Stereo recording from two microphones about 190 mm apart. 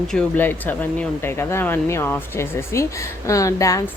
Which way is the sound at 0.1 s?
10° left (ahead or behind).